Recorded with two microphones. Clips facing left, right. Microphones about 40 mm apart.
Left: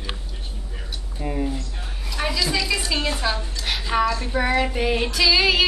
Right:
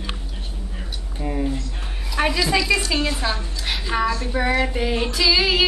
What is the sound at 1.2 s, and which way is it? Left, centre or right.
Child singing, centre.